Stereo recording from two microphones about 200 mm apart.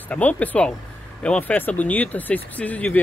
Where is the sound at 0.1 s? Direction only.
5° left (ahead or behind).